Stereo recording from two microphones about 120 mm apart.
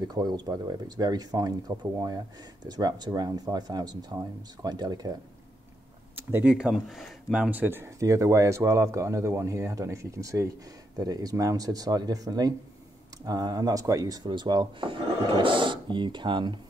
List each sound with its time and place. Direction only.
0.1 s speech: 35° right (ahead or behind)
6.1 s speech: 15° right (ahead or behind); by 16.5 s 40° right (ahead or behind)